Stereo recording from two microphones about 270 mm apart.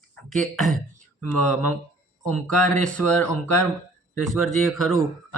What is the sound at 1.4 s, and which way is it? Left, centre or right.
Speech, left.